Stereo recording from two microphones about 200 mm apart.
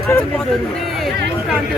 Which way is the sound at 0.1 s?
5° left (ahead or behind).